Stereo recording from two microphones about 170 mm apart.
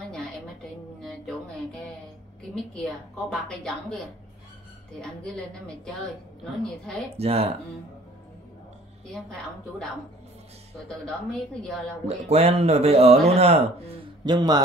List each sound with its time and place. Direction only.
1.0 s music: 5° left (ahead or behind)
2.5 s a woman's voice: 5° left (ahead or behind)
6.6 s a woman's voice: centre (ahead or behind)
7.2 s speech: 35° right (ahead or behind)
9.0 s a woman's voice: centre (ahead or behind)
10.9 s a woman's voice: 5° left (ahead or behind)
12.1 s speech: 35° right (ahead or behind)
14.3 s a man's voice: 25° right (ahead or behind)